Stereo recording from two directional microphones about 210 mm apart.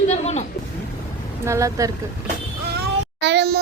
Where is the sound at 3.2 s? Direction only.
50° right (ahead or behind).